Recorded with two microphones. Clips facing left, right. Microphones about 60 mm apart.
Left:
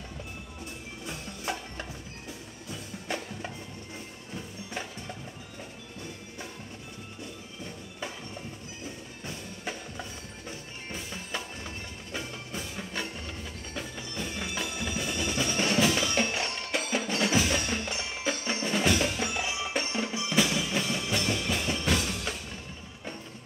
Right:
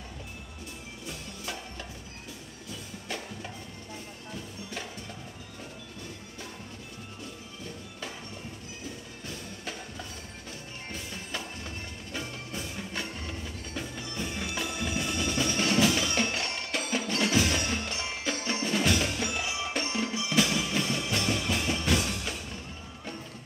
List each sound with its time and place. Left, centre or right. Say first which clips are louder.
1.0 s music: left 4 dB; left
9.2 s music: left 3 dB; centre